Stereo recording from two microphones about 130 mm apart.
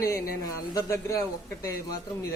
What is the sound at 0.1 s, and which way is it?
Speech, 30° left (ahead or behind).